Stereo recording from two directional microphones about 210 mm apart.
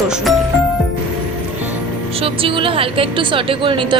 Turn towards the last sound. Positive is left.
turn(degrees=-25)  # may be behind; listen again after turning